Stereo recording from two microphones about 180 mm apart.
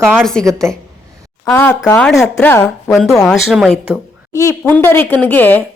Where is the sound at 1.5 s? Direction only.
5° left (ahead or behind).